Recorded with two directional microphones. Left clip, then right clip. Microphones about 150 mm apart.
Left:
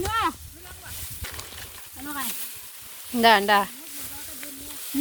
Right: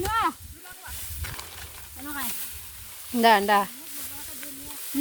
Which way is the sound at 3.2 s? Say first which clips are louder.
Left 1 dB; 20° right (ahead or behind).